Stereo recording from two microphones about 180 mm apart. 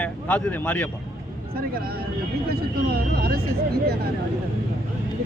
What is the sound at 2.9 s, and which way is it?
Vehicle, 60° right (ahead or behind).